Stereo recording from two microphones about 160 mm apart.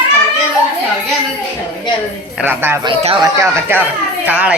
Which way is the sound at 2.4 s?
10° right (ahead or behind).